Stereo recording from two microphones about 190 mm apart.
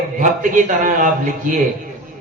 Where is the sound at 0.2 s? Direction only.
45° right (ahead or behind).